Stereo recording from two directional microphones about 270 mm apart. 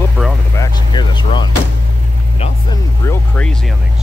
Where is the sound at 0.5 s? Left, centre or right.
Centre.